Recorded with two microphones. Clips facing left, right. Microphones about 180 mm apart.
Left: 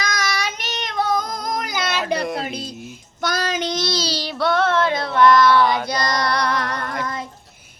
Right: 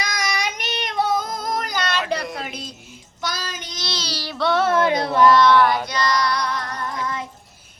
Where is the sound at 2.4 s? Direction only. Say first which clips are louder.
Left 4 dB; 35° left (ahead or behind).